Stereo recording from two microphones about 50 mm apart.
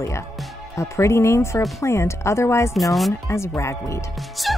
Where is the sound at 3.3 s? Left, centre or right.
Left.